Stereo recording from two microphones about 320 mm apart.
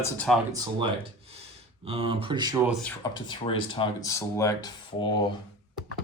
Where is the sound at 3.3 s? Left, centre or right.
Centre.